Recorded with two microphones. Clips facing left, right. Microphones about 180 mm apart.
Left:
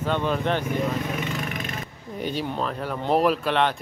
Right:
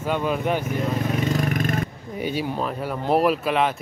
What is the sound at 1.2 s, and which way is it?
Vehicle, 40° right (ahead or behind).